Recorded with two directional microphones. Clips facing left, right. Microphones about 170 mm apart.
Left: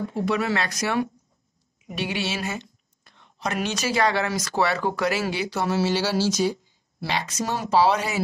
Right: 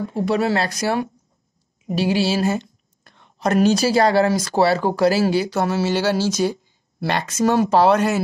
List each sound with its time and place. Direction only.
0.1 s speech: 35° right (ahead or behind)
3.0 s speech: 50° right (ahead or behind)